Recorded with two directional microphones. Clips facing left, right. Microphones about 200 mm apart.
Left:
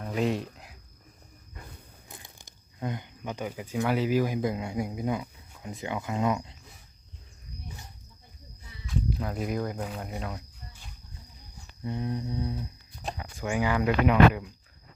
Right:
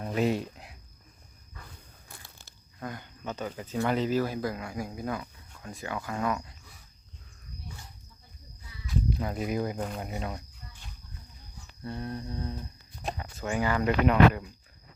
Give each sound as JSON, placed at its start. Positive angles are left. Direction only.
{"t": 0.1, "sound": "a sound", "side_deg": 0}
{"t": 2.0, "sound": "speech", "side_deg": 20}
{"t": 8.9, "sound": "speech", "side_deg": 0}
{"t": 10.0, "sound": "a sound", "side_deg": 0}
{"t": 11.8, "sound": "speech", "side_deg": 15}
{"t": 13.0, "sound": "speech", "side_deg": 0}
{"t": 13.4, "sound": "speech", "side_deg": 10}